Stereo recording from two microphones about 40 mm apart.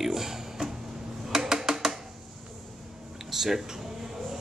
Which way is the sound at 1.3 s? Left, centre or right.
Centre.